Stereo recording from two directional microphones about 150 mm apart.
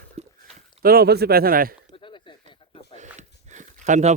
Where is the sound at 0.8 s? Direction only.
90° right.